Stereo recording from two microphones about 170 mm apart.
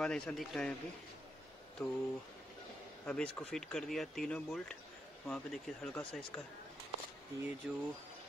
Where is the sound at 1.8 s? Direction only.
5° left (ahead or behind).